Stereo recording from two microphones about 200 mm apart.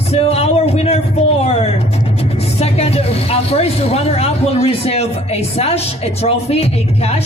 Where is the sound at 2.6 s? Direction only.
30° left (ahead or behind).